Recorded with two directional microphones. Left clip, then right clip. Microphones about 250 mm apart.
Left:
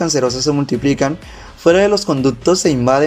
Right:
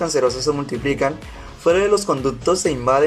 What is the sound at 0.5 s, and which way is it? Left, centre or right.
Speech, left.